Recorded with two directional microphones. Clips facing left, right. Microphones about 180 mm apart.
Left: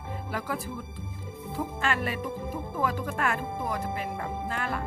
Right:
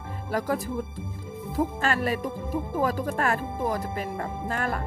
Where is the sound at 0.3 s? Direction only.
40° right (ahead or behind).